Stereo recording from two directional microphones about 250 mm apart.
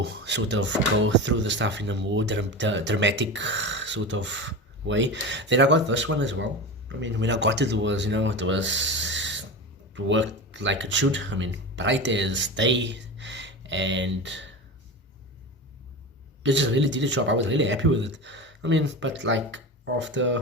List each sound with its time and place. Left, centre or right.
0.3 s speech: right
16.4 s speech: right